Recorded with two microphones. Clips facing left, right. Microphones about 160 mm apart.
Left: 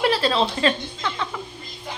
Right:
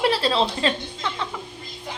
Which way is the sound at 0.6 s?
25° right (ahead or behind).